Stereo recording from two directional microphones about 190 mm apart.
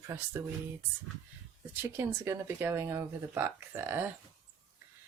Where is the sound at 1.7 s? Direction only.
10° right (ahead or behind).